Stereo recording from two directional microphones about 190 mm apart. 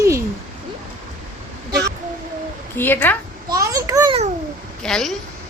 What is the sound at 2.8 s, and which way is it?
Speech, 10° left (ahead or behind).